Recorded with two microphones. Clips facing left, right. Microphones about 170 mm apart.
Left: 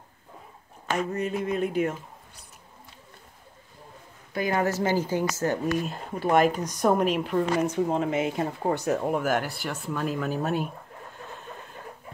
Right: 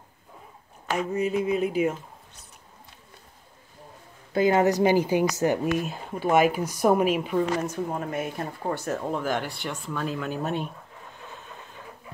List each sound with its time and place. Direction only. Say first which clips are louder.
0.9 s speech: right 3 dB; 5° right (ahead or behind)
4.3 s a woman's voice: right 5 dB; 25° right (ahead or behind)
5.8 s speech: even; centre (ahead or behind)
7.6 s speech: left 5 dB; 20° left (ahead or behind); by 10.7 s 5° left (ahead or behind)